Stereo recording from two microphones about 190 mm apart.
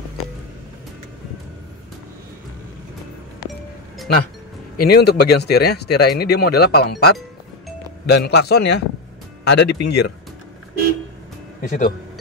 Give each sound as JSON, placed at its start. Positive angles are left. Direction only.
{"t": 4.7, "sound": "speech", "side_deg": 55}
{"t": 11.6, "sound": "speech", "side_deg": 40}